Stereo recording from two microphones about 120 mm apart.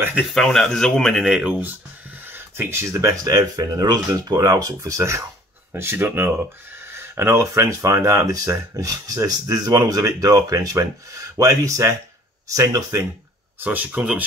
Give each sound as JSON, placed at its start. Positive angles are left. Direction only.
{"t": 0.2, "sound": "speech", "side_deg": 0}
{"t": 1.2, "sound": "speech", "side_deg": -5}
{"t": 2.2, "sound": "speech", "side_deg": -20}
{"t": 13.6, "sound": "speech", "side_deg": -15}